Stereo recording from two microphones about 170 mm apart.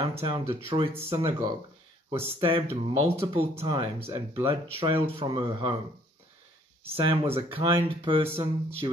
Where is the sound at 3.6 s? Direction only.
35° right (ahead or behind).